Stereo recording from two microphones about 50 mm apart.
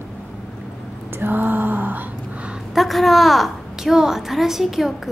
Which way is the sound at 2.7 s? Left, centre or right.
Centre.